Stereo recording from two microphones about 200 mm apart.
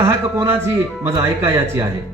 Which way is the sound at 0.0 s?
15° right (ahead or behind).